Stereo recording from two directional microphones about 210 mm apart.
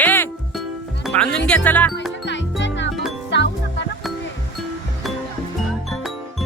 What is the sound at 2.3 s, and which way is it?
Music, 60° left (ahead or behind).